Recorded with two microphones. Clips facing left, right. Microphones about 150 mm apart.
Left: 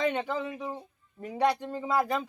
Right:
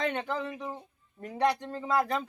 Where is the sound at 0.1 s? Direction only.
10° left (ahead or behind).